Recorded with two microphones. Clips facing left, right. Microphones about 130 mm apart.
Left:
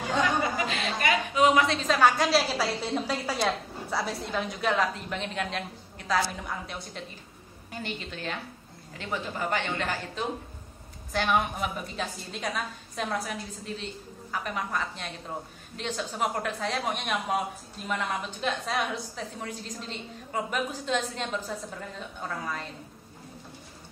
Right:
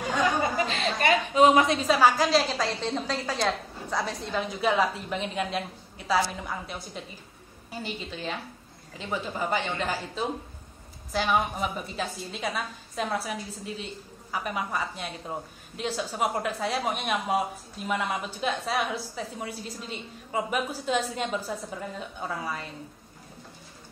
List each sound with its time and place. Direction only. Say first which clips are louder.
0.6 s a woman's voice: right 2 dB; 30° right (ahead or behind)
1.8 s a woman's voice: right 1 dB; 5° right (ahead or behind)